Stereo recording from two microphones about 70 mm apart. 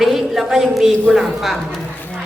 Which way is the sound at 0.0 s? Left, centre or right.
Centre.